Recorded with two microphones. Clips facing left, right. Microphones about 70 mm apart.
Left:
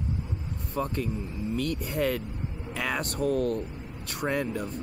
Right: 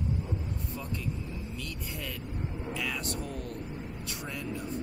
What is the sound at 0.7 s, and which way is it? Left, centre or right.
Speech, left.